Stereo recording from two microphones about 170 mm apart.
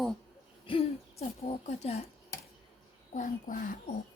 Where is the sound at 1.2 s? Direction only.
40° left (ahead or behind).